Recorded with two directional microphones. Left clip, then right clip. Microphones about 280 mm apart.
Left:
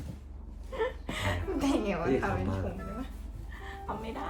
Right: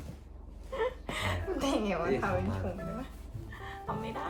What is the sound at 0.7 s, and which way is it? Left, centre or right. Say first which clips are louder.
A woman's voice: even; centre.